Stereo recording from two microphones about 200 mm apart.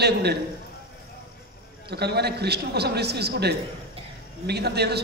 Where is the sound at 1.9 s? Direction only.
55° right (ahead or behind).